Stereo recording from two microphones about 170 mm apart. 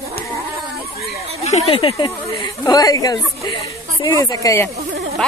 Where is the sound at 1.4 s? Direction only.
35° left (ahead or behind); by 4.7 s 20° left (ahead or behind).